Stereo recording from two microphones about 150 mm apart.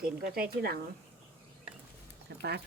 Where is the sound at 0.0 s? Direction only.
85° right.